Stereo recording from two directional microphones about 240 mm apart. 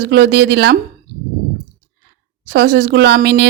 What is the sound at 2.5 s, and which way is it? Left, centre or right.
Speech, right.